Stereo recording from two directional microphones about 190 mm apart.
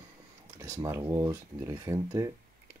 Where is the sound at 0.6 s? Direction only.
15° right (ahead or behind).